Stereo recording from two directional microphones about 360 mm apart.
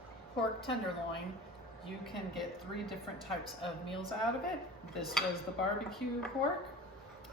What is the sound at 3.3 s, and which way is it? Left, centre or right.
Speech, centre.